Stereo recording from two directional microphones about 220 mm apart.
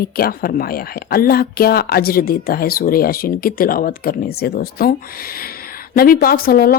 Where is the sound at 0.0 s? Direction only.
45° left (ahead or behind).